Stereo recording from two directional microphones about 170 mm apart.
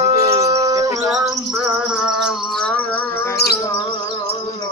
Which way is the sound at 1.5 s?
5° right (ahead or behind).